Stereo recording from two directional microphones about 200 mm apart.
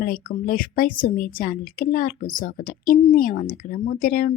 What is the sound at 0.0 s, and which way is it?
A woman's voice, 45° left (ahead or behind).